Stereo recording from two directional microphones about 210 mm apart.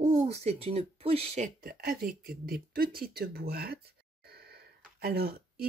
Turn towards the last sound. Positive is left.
turn(degrees=-45)  # may be behind; listen again after turning